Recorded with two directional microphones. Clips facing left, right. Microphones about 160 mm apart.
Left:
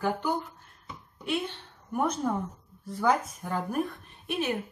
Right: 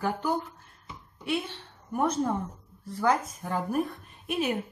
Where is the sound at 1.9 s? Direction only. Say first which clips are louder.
Right 1 dB; centre (ahead or behind).